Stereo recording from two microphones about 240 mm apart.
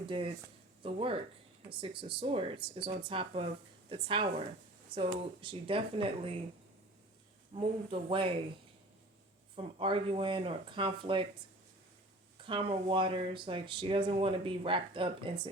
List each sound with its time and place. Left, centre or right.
0.1 s speech: right
7.5 s speech: right
9.6 s speech: right
12.4 s speech: right